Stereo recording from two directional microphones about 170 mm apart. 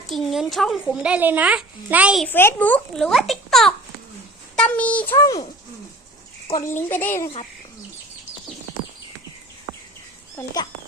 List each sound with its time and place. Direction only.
0.1 s a woman's voice: centre (ahead or behind)
2.2 s a woman's voice: 15° left (ahead or behind)
6.7 s a child's voice: 15° left (ahead or behind)
10.3 s a child's voice: 20° left (ahead or behind)